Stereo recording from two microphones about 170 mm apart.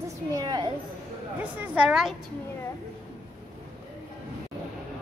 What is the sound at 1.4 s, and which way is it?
Speech, 10° right (ahead or behind).